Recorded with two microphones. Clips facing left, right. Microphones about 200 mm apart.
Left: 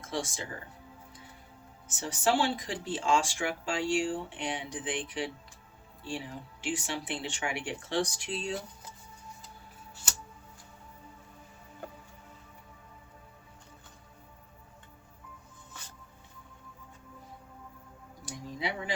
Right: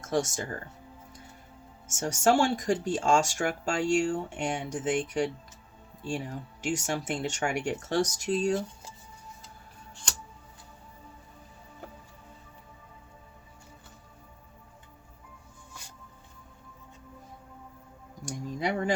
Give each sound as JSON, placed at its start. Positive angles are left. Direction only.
{"t": 0.0, "sound": "speech", "side_deg": -45}
{"t": 1.9, "sound": "speech", "side_deg": -45}
{"t": 9.9, "sound": "music", "side_deg": 5}
{"t": 18.3, "sound": "a sound", "side_deg": -45}